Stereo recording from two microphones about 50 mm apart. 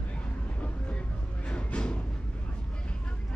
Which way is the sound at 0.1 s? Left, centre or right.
Left.